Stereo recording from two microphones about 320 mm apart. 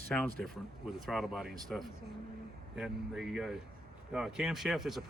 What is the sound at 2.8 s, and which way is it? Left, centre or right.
Speech, centre.